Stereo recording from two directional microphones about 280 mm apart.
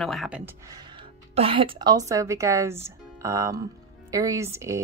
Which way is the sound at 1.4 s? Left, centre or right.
Centre.